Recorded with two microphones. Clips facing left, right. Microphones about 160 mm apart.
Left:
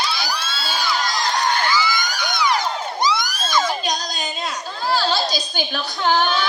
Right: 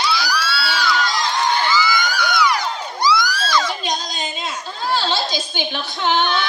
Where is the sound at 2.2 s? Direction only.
20° left (ahead or behind).